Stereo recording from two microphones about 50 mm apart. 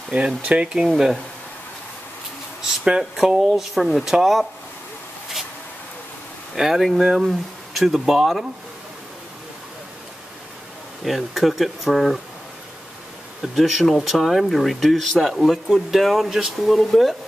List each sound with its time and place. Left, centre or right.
0.4 s speech: right
0.9 s speech: centre
2.8 s speech: centre
6.5 s speech: centre
11.1 s speech: centre
13.4 s speech: centre